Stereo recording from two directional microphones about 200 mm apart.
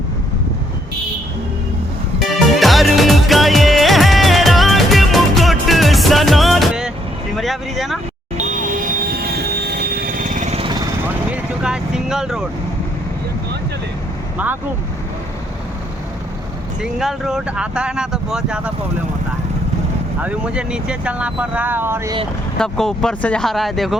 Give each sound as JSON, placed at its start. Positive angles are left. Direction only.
{"t": 2.1, "sound": "music", "side_deg": 0}
{"t": 7.3, "sound": "speech", "side_deg": 0}
{"t": 8.4, "sound": "vehicle", "side_deg": -40}
{"t": 11.3, "sound": "vehicle", "side_deg": -5}
{"t": 14.3, "sound": "speech", "side_deg": -10}
{"t": 16.8, "sound": "speech", "side_deg": 0}
{"t": 20.2, "sound": "speech", "side_deg": -5}
{"t": 22.5, "sound": "speech", "side_deg": 5}